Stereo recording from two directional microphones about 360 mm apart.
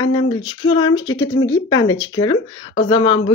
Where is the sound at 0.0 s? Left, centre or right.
Centre.